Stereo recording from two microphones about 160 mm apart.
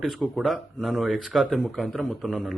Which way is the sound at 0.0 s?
Centre (ahead or behind).